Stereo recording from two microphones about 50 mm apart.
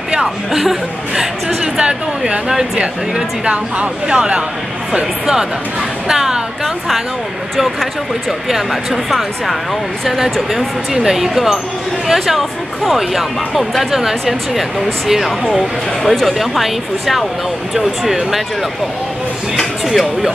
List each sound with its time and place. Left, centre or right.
0.1 s speech: centre
1.8 s speech: centre
19.9 s speech: centre